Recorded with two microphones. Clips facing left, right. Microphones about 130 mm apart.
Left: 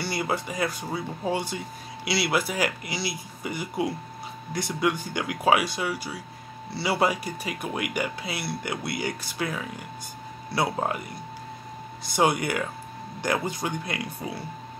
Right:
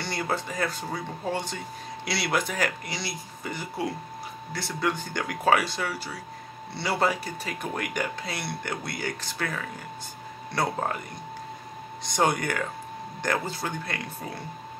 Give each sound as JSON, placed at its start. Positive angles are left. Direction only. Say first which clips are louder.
{"t": 0.0, "sound": "speech", "louder": "left 1 dB", "side_deg": 10}
{"t": 12.0, "sound": "speech", "louder": "left 2 dB", "side_deg": 5}